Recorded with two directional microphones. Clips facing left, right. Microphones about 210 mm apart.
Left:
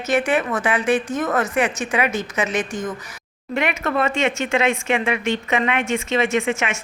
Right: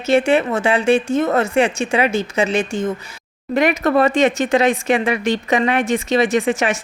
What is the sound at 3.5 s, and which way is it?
Speech, 40° right (ahead or behind).